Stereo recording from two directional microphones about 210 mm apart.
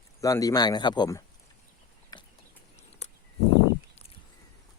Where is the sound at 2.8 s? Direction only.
35° left (ahead or behind).